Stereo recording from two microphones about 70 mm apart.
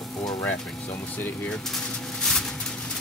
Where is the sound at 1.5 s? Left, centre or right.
Centre.